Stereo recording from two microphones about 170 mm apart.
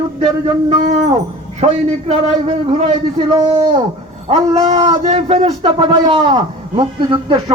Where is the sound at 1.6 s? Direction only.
35° right (ahead or behind).